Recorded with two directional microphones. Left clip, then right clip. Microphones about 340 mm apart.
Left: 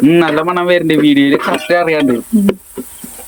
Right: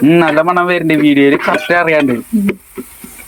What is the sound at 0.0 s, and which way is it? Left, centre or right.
Speech, centre.